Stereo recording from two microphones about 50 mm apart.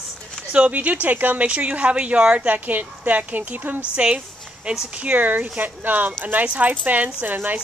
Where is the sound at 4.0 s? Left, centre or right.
Right.